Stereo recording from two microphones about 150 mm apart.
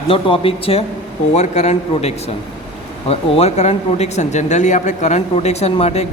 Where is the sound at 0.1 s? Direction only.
40° left (ahead or behind).